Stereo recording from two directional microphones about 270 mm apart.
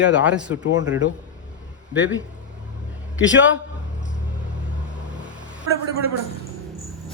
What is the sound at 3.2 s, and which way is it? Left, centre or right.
Speech, left.